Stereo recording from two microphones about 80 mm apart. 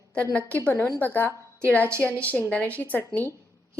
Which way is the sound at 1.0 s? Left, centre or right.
Left.